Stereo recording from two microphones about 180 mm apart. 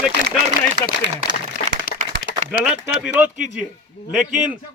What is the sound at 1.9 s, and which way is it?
Applause, 50° left (ahead or behind).